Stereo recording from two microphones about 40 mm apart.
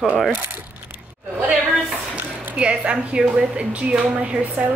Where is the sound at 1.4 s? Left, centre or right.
Right.